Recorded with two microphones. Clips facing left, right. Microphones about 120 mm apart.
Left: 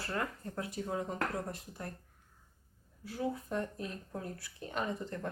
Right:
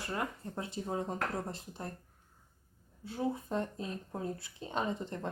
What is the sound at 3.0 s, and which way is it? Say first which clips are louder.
Speech: right 1 dB; 25° right (ahead or behind).